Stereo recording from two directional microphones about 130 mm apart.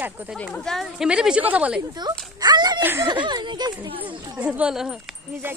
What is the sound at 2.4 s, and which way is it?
Speech, 30° right (ahead or behind).